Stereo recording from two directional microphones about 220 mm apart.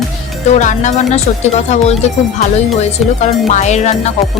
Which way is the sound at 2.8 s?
30° left (ahead or behind).